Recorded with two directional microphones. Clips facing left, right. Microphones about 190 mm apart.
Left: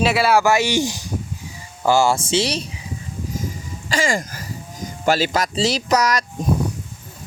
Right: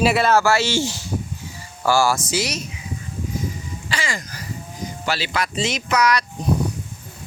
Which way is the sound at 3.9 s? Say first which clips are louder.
Left 7 dB; 45° left (ahead or behind).